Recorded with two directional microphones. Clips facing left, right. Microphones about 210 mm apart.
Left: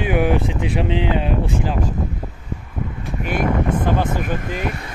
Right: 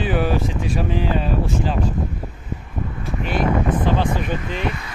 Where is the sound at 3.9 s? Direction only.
50° left (ahead or behind).